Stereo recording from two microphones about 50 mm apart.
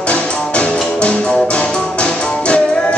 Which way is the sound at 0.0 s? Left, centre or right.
Left.